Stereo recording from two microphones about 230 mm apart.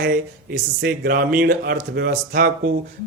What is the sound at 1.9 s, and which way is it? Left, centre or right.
Speech, right.